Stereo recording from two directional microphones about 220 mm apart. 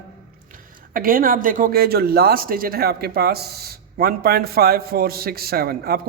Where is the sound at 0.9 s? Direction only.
40° right (ahead or behind).